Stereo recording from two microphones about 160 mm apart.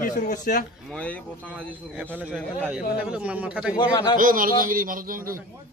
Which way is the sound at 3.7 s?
25° left (ahead or behind).